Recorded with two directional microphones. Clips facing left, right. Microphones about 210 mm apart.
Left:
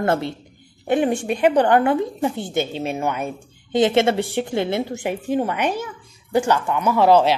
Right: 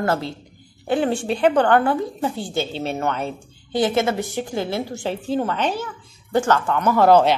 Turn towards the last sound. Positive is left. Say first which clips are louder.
# right 1 dB
turn(degrees=5)  # may be behind; listen again after turning